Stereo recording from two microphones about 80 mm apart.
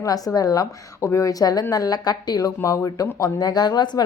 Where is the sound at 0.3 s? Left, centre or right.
Left.